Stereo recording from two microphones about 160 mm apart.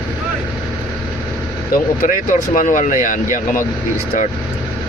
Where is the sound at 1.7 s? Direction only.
60° left (ahead or behind).